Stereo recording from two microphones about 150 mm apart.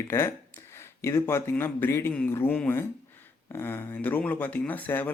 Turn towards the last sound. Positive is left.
turn(degrees=10)  # may be behind; listen again after turning